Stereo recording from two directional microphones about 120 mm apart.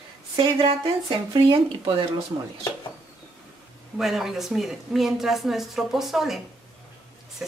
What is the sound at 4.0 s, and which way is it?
A woman's voice, centre (ahead or behind).